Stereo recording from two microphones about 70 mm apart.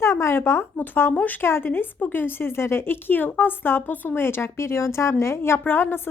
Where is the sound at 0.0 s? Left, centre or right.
Left.